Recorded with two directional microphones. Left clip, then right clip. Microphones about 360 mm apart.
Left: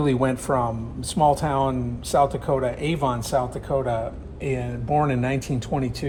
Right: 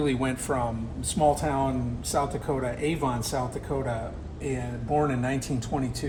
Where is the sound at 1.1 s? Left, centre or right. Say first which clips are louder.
Left 4 dB; centre.